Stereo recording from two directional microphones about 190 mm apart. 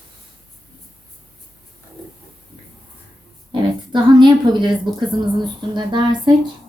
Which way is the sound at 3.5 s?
25° right (ahead or behind).